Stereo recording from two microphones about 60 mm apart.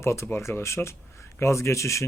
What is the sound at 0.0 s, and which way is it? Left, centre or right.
Speech, left.